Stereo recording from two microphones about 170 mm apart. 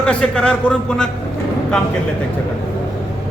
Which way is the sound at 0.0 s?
5° left (ahead or behind).